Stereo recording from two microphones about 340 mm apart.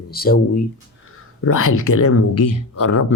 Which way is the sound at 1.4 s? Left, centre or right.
Left.